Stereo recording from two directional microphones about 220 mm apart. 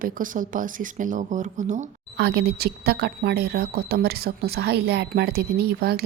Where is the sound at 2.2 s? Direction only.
50° right (ahead or behind).